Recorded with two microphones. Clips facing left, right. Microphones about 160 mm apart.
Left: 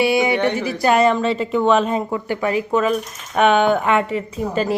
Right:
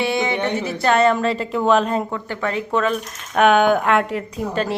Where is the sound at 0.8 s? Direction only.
10° left (ahead or behind).